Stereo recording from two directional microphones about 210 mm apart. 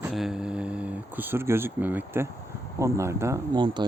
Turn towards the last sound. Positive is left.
turn(degrees=-20)  # may be behind; listen again after turning